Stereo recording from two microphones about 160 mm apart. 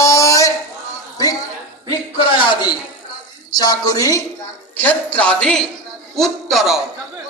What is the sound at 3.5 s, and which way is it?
Speech, 25° left (ahead or behind).